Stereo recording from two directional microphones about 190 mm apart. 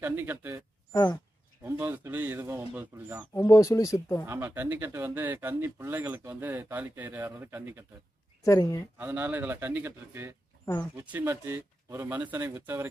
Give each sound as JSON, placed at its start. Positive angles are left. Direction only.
{"t": 0.0, "sound": "speech", "side_deg": -10}
{"t": 3.3, "sound": "speech", "side_deg": 15}
{"t": 4.3, "sound": "speech", "side_deg": -10}
{"t": 8.4, "sound": "speech", "side_deg": 15}
{"t": 8.9, "sound": "speech", "side_deg": -10}